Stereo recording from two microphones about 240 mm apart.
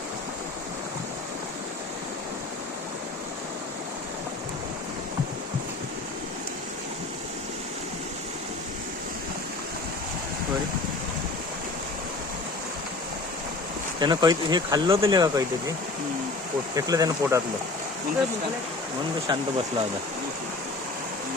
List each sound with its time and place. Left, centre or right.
14.0 s speech: centre
16.7 s speech: centre
19.3 s speech: right